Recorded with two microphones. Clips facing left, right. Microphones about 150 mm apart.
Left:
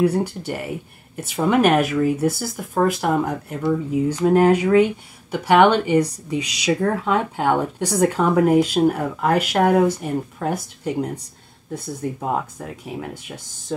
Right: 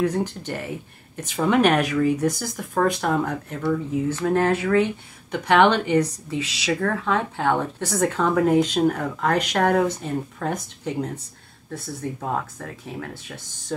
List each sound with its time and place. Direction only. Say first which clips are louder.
0.0 s speech: left 4 dB; 10° left (ahead or behind)
13.7 s speech: left 2 dB; 5° left (ahead or behind)